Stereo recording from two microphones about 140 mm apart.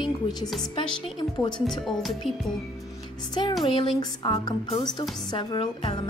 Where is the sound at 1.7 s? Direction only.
Centre (ahead or behind).